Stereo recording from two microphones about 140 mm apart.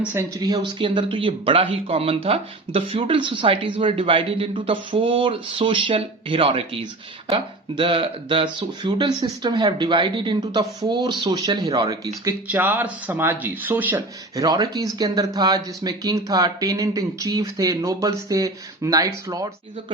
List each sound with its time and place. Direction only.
0.3 s speech: 30° right (ahead or behind)
12.5 s speech: 15° right (ahead or behind)
14.3 s speech: 25° right (ahead or behind)